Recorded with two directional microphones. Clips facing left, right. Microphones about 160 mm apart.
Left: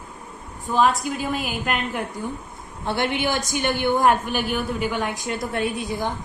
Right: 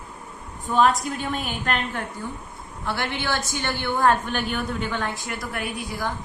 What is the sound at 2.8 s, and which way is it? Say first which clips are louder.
A woman's voice: left 4 dB; 20° left (ahead or behind).